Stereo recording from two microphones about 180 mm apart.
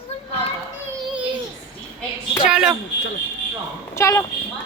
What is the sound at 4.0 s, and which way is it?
Speech, 15° left (ahead or behind).